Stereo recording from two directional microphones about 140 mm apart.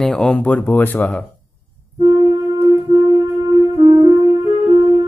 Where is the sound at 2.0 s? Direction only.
35° right (ahead or behind).